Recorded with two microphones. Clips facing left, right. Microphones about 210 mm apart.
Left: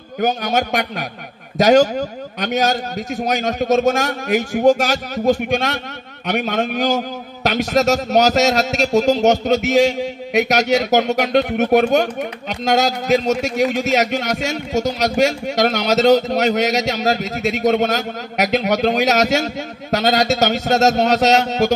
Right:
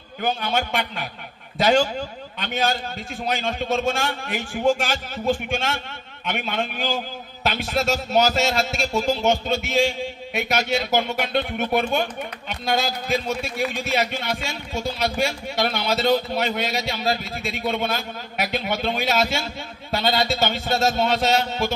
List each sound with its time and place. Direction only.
0.2 s a man's voice: 40° left (ahead or behind)
7.6 s a man's voice: 75° left (ahead or behind)
15.1 s a man's voice: 75° left (ahead or behind)